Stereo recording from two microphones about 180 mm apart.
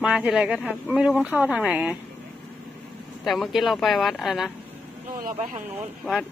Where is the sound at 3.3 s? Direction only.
Centre (ahead or behind).